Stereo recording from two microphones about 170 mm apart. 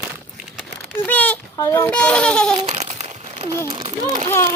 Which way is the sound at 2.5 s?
40° right (ahead or behind).